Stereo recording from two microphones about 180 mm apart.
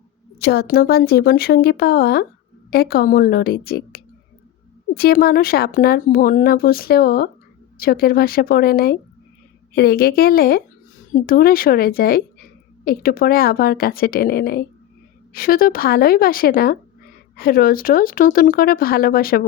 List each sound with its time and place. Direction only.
0.3 s speech: 60° left (ahead or behind)